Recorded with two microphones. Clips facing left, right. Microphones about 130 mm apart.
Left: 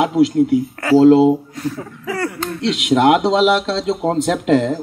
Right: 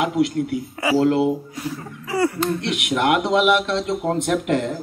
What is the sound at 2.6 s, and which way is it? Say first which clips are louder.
A man's voice: left 12 dB; 25° left (ahead or behind).